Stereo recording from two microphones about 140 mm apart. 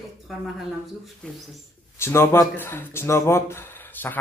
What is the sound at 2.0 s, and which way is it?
Speech, 15° left (ahead or behind).